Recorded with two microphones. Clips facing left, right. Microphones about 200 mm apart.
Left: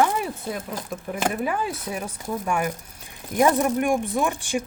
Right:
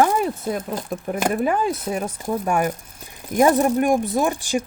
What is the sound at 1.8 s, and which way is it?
Speech, 35° right (ahead or behind).